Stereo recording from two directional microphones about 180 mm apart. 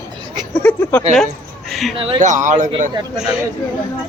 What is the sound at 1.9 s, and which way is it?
Speech, 30° right (ahead or behind).